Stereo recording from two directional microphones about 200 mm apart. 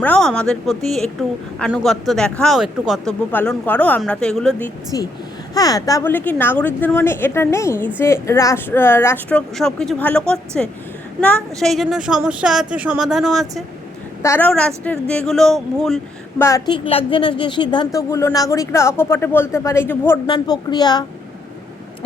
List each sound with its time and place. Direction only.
0.0 s speech: 5° left (ahead or behind)
4.9 s a woman's voice: 20° left (ahead or behind); by 13.5 s centre (ahead or behind)
14.2 s a woman's voice: 10° left (ahead or behind)
16.4 s a woman's voice: 15° left (ahead or behind)
20.2 s a woman's voice: 25° left (ahead or behind)